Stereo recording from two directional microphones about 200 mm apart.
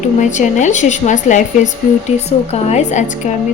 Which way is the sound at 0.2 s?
40° left (ahead or behind).